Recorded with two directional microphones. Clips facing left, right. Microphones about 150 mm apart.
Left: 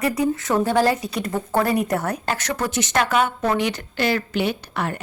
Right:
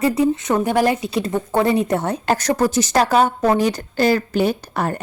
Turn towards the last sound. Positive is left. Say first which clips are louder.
# right 4 dB
turn(degrees=-40)  # may be behind; listen again after turning